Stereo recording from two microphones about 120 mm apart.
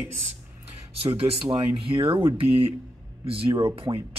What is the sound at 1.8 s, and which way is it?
Speech, 50° right (ahead or behind).